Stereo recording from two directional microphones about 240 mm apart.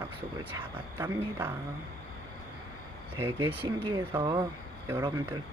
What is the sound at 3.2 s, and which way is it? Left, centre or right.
Speech, centre.